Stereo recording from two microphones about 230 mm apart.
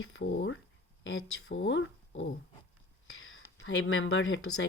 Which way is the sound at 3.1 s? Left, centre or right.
Left.